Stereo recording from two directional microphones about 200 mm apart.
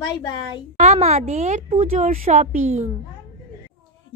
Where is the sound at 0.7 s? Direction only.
30° right (ahead or behind).